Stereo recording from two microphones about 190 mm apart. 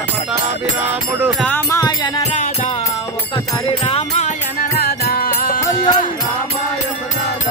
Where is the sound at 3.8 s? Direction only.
30° left (ahead or behind).